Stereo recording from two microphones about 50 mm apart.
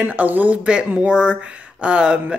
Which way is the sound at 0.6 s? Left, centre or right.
Right.